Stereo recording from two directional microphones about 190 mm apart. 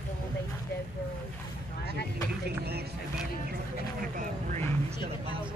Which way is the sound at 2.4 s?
55° right (ahead or behind).